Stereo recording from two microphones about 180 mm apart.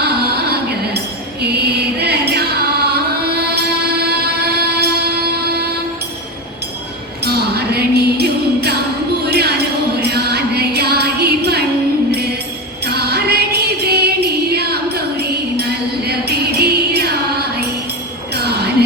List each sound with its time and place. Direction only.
0.0 s music: 60° right (ahead or behind)
1.4 s chant: 65° right (ahead or behind)
7.3 s music: 60° right (ahead or behind)
9.2 s a sound: 65° right (ahead or behind)
10.0 s music: 60° right (ahead or behind)
12.8 s music: 60° right (ahead or behind)